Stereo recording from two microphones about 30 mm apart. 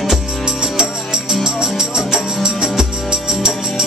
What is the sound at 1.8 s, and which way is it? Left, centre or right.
Music, centre.